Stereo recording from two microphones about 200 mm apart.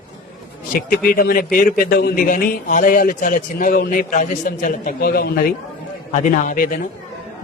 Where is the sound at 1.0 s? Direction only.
45° left (ahead or behind).